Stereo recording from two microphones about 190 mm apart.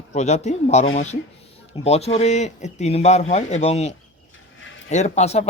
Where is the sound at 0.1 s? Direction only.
40° left (ahead or behind).